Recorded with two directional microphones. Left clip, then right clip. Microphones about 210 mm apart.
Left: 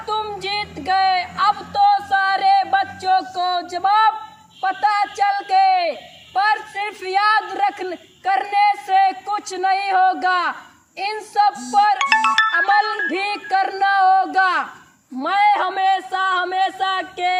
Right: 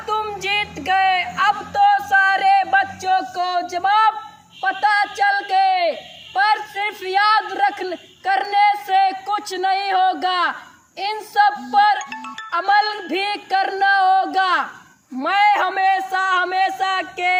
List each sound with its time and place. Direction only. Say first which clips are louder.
0.1 s music: right 2 dB; 5° right (ahead or behind)
4.6 s a sound: right 1 dB; 10° left (ahead or behind)
10.9 s speech: right 1 dB; 10° left (ahead or behind)
11.9 s music: left 14 dB; 45° left (ahead or behind)
12.5 s a man's voice: left 1 dB; 10° left (ahead or behind)